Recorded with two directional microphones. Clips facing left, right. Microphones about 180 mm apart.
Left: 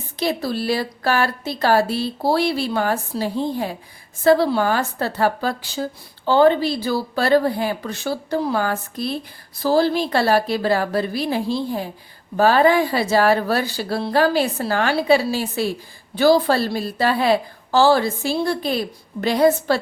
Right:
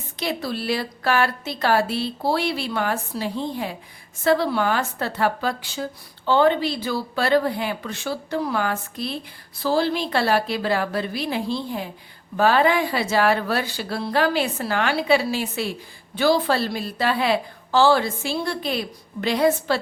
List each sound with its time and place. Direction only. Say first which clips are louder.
0.2 s a woman's voice: left 4 dB; 40° left (ahead or behind)